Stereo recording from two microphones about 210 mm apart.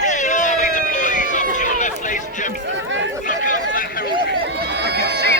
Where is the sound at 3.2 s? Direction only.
40° left (ahead or behind).